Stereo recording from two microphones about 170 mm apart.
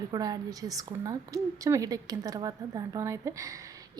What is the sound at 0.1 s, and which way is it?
A woman's voice, 20° right (ahead or behind).